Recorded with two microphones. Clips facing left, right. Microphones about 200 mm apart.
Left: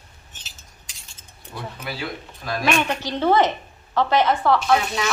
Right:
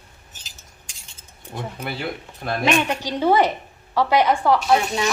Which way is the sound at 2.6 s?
15° right (ahead or behind).